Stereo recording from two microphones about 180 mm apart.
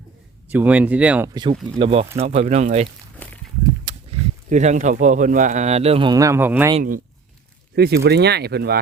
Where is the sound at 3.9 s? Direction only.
25° right (ahead or behind).